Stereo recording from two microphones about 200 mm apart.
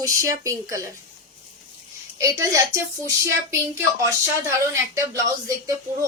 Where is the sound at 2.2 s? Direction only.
15° right (ahead or behind).